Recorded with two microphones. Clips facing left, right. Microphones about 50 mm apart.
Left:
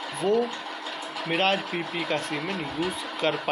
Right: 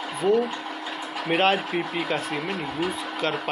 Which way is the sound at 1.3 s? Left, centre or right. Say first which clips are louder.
Right 3 dB; centre.